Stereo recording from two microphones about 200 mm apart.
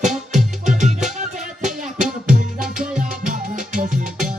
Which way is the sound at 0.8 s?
35° right (ahead or behind).